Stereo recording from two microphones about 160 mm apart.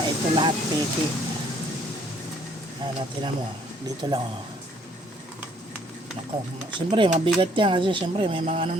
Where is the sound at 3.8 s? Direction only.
25° right (ahead or behind).